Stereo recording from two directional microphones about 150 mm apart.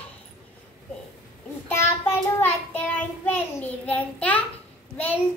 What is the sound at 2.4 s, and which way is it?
A child's voice, 10° left (ahead or behind).